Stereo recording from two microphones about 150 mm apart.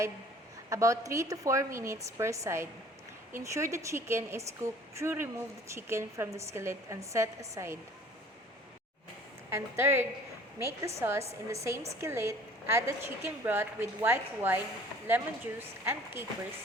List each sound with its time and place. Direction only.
0.7 s a woman's voice: 20° right (ahead or behind)
9.5 s a woman's voice: 15° right (ahead or behind)